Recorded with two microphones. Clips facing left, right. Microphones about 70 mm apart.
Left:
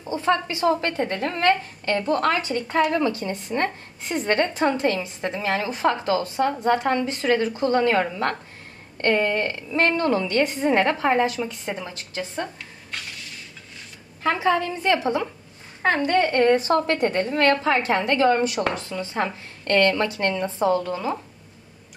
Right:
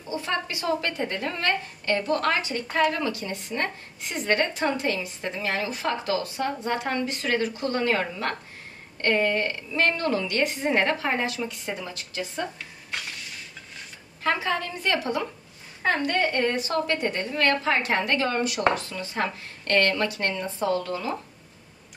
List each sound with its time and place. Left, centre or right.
0.1 s a woman's voice: left
14.2 s a woman's voice: left
16.2 s a woman's voice: left